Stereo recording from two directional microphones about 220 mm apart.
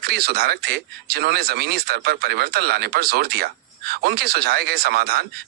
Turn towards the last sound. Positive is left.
turn(degrees=-45)  # may be behind; listen again after turning